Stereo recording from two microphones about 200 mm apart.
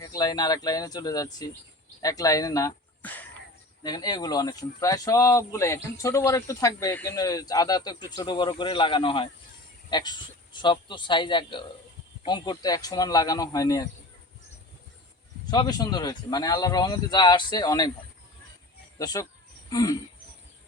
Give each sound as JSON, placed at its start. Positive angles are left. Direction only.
{"t": 0.0, "sound": "speech", "side_deg": 20}
{"t": 3.8, "sound": "speech", "side_deg": 20}
{"t": 15.4, "sound": "speech", "side_deg": 20}
{"t": 18.9, "sound": "speech", "side_deg": 20}
{"t": 19.7, "sound": "a sound", "side_deg": 20}